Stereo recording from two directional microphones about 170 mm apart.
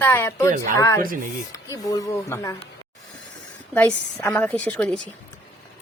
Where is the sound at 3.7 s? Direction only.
10° left (ahead or behind).